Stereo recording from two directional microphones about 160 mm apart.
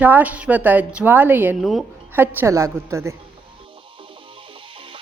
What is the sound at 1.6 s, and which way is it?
Speech, centre (ahead or behind).